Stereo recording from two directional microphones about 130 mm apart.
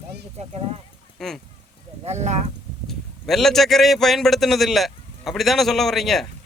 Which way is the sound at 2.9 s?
Centre (ahead or behind).